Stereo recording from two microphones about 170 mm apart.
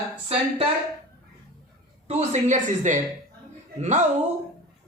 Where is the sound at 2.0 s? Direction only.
40° right (ahead or behind).